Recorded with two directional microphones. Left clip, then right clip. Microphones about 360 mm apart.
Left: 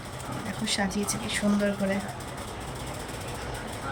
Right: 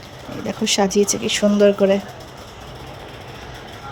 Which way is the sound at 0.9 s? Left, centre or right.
Centre.